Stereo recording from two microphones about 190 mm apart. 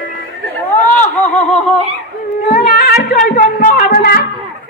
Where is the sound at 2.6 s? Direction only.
55° left (ahead or behind).